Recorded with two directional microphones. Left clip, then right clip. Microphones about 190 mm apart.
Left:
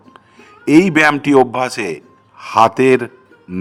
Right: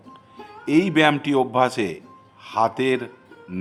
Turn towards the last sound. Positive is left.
turn(degrees=25)  # may be behind; listen again after turning